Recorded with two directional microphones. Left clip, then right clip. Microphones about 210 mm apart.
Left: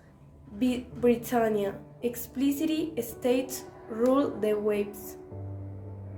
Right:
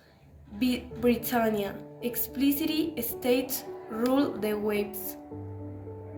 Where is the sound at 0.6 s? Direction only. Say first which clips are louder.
Left 1 dB; 45° left (ahead or behind).